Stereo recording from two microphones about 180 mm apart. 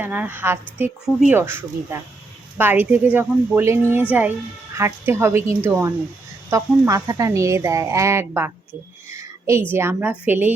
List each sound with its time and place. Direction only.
0.0 s speech: 10° right (ahead or behind)
2.6 s speech: 10° right (ahead or behind)
9.0 s a sound: 15° right (ahead or behind)
9.7 s speech: 10° right (ahead or behind)